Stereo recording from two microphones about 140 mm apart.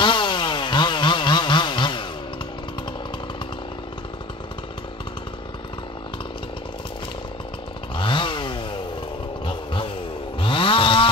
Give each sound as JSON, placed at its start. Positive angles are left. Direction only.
{"t": 0.0, "sound": "chainsaw", "side_deg": 35}
{"t": 7.9, "sound": "chainsaw", "side_deg": 35}
{"t": 10.4, "sound": "chainsaw", "side_deg": 40}